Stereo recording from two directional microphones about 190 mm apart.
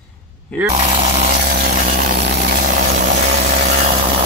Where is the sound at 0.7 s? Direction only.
30° right (ahead or behind).